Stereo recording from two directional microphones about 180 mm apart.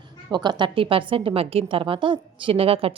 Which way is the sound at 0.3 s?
25° right (ahead or behind).